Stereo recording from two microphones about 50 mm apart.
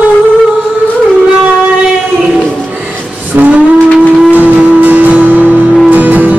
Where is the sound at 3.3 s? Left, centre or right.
Right.